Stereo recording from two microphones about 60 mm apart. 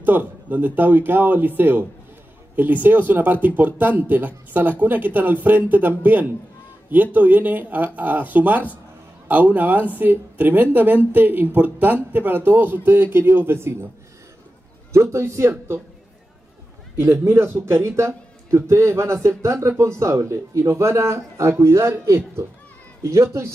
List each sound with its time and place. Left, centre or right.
0.0 s speech: right
14.9 s a man's voice: right
17.0 s a man's voice: right